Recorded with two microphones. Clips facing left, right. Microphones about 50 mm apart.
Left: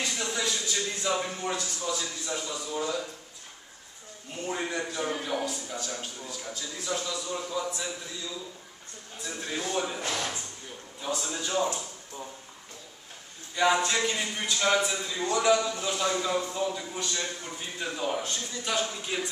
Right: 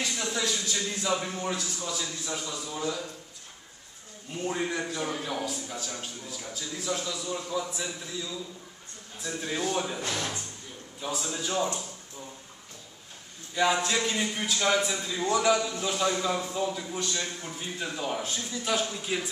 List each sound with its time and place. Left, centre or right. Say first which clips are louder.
0.0 s speech: even; centre
4.5 s a man's voice: right 1 dB; centre
9.2 s a man's voice: right 3 dB; centre
9.9 s speech: even; centre
11.0 s a man's voice: even; centre
13.6 s a man's voice: left 1 dB; centre